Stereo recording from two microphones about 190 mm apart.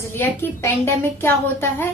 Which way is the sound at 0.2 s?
10° left (ahead or behind).